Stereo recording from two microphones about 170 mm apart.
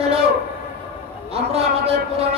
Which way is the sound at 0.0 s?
35° right (ahead or behind).